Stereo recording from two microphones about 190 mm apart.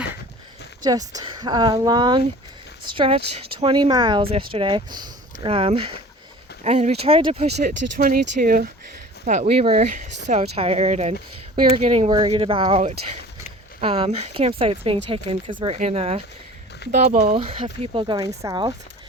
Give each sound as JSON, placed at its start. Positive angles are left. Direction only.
{"t": 0.9, "sound": "speech", "side_deg": -20}
{"t": 7.6, "sound": "speech", "side_deg": -45}